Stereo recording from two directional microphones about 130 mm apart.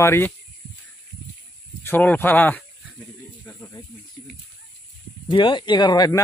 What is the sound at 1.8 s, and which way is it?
Speech, 15° left (ahead or behind).